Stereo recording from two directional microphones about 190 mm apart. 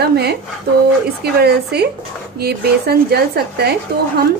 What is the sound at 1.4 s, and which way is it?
Speech, 60° right (ahead or behind).